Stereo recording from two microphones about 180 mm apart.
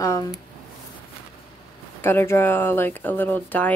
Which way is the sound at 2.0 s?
15° left (ahead or behind).